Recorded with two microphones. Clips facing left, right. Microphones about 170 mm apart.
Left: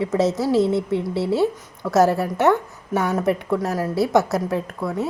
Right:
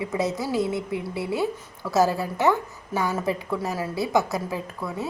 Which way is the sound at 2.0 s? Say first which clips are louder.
Left 4 dB; 70° left (ahead or behind).